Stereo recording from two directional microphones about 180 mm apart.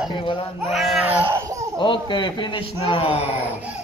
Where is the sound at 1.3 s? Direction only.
15° right (ahead or behind).